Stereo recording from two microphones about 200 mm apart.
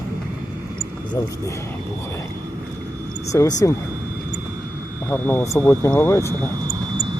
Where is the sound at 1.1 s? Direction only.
15° left (ahead or behind).